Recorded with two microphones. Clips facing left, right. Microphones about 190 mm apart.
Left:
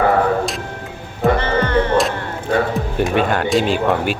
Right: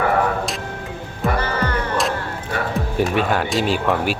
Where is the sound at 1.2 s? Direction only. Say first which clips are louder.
Left 5 dB; 25° left (ahead or behind).